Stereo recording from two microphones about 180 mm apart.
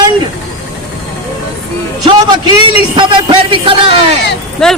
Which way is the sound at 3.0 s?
30° right (ahead or behind).